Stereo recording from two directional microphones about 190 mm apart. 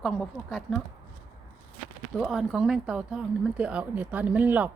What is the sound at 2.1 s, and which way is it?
Speech, centre (ahead or behind).